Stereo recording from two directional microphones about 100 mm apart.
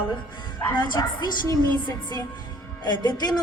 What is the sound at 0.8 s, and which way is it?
A woman's voice, 50° left (ahead or behind).